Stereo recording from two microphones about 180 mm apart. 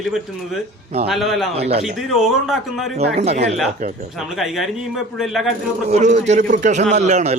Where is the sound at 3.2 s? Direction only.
40° right (ahead or behind).